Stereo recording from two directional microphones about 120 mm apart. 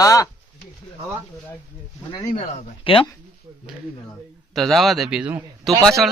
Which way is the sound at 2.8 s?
50° left (ahead or behind).